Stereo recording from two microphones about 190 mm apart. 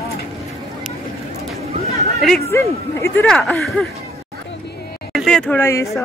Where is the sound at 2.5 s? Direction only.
15° left (ahead or behind).